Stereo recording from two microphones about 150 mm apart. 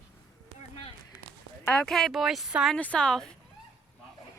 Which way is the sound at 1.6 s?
5° left (ahead or behind).